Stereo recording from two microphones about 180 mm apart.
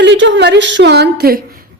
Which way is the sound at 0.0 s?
80° right.